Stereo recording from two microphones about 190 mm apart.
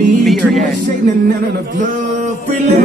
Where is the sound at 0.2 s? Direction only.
Centre (ahead or behind).